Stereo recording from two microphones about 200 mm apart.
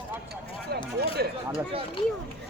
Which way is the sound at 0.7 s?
50° right (ahead or behind).